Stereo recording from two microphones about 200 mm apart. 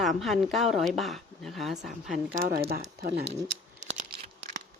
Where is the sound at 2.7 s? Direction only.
55° right (ahead or behind).